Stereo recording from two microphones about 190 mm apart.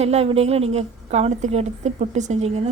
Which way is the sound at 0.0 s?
35° right (ahead or behind).